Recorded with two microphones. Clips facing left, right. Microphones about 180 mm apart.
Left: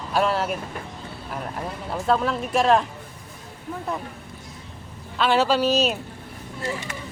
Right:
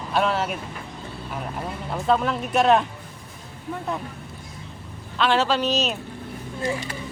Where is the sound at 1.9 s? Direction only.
Centre (ahead or behind).